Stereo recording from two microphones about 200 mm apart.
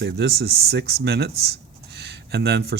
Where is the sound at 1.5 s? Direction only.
55° right (ahead or behind).